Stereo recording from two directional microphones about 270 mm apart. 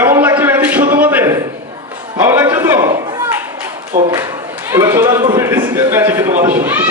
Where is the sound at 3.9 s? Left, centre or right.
Right.